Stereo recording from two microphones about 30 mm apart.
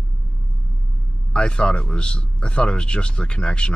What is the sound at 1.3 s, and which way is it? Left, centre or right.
Speech, left.